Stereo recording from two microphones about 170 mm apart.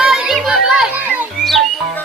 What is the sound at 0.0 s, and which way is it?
Children playing, 5° right (ahead or behind).